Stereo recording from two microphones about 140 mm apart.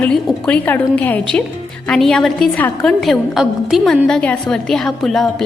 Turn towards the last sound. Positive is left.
turn(degrees=0)  # may be behind; listen again after turning